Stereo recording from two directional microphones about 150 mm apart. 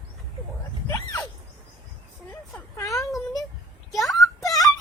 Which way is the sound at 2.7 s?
20° left (ahead or behind).